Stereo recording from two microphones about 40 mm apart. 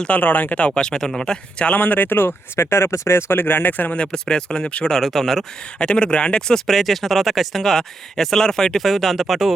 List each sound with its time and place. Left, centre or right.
0.1 s speech: left
0.5 s speech: left
1.7 s speech: left
4.1 s speech: left
4.9 s speech: centre
5.8 s speech: left
6.7 s speech: centre
8.8 s speech: centre